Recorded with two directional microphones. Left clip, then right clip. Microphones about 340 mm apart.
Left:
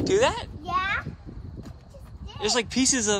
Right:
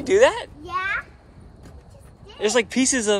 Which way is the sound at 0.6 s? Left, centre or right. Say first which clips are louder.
Left 2 dB; left.